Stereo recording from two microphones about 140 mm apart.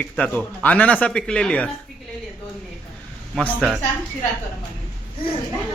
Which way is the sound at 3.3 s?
10° left (ahead or behind).